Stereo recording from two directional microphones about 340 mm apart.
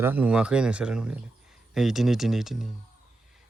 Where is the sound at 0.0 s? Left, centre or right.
Centre.